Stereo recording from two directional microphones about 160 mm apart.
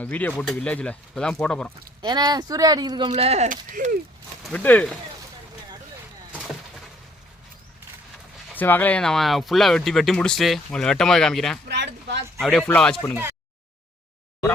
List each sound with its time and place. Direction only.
0.0 s speech: 10° left (ahead or behind)
2.0 s speech: 25° right (ahead or behind)
3.1 s speech: 45° right (ahead or behind)
4.4 s speech: 10° left (ahead or behind)
8.5 s speech: 10° left (ahead or behind)
11.7 s speech: 90° right
12.4 s speech: 5° left (ahead or behind)